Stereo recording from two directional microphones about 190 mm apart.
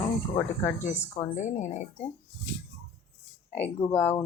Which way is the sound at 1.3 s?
40° left (ahead or behind).